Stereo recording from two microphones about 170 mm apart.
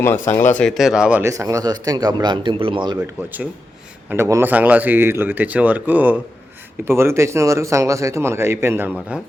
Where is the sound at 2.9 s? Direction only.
10° right (ahead or behind).